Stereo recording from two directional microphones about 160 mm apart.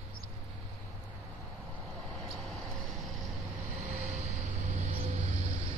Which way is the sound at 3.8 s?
45° right (ahead or behind).